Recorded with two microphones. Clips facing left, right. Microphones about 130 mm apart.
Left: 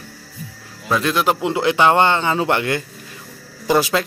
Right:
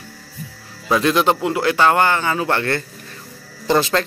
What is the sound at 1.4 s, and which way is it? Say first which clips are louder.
A man's voice: left 1 dB; 20° left (ahead or behind).